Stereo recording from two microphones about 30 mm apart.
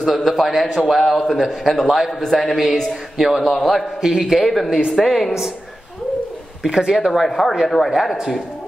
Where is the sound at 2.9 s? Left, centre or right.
Centre.